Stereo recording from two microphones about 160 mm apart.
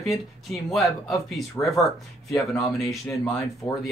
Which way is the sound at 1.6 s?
15° left (ahead or behind).